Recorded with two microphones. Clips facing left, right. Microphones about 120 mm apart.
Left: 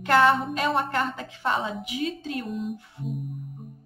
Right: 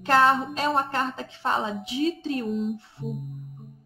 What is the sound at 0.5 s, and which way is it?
Speech, 30° right (ahead or behind).